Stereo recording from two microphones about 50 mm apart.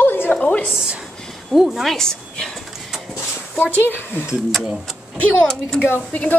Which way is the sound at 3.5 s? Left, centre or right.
Left.